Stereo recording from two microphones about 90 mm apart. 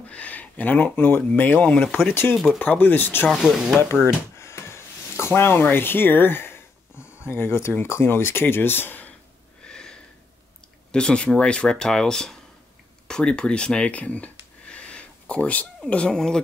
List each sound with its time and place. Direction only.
0.1 s speech: 15° left (ahead or behind)
3.3 s speech: centre (ahead or behind)
3.9 s speech: 30° left (ahead or behind)
9.6 s a sound: 10° left (ahead or behind)
10.9 s speech: 10° left (ahead or behind)